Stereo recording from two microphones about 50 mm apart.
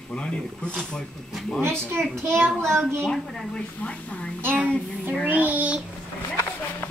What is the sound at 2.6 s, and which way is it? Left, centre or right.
Speech, right.